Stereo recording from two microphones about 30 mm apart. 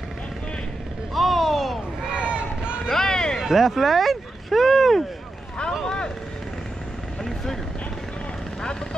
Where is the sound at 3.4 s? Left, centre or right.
Centre.